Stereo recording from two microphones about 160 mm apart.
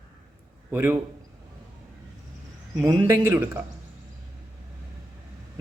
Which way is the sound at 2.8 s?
15° right (ahead or behind).